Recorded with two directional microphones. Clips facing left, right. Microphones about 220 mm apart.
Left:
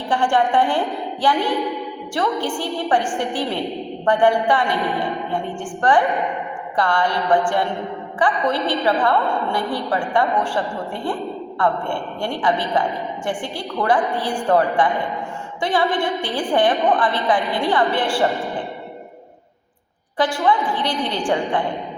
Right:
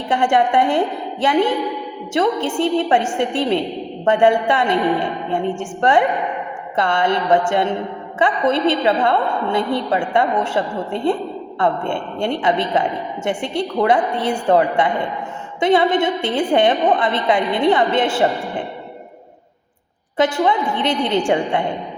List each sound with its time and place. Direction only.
0.1 s a woman's voice: 20° right (ahead or behind)
20.1 s a woman's voice: 20° right (ahead or behind)